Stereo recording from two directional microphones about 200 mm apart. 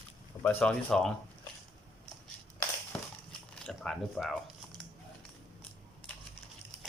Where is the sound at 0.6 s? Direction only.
5° left (ahead or behind).